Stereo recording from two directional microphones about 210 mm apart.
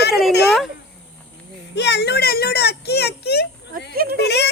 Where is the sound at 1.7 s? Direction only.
55° left (ahead or behind).